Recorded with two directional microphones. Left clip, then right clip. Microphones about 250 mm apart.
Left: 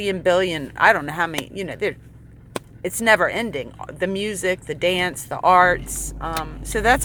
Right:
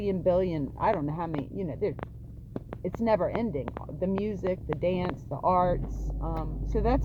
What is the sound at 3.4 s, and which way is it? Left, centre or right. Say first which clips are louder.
Speech: left 6 dB; left.